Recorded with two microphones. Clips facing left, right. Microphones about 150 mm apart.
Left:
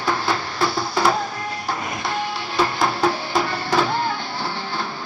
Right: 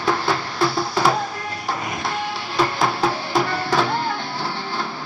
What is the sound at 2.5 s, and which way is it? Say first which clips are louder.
Music: even; centre (ahead or behind).